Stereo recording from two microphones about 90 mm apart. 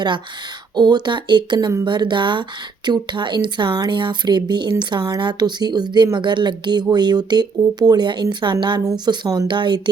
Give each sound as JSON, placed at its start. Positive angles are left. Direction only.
{"t": 0.8, "sound": "a woman's voice", "side_deg": -55}
{"t": 9.0, "sound": "a woman's voice", "side_deg": -45}
{"t": 9.5, "sound": "speech", "side_deg": -60}